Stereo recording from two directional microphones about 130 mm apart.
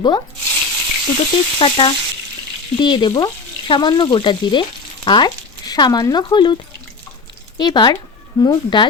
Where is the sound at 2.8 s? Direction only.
35° left (ahead or behind).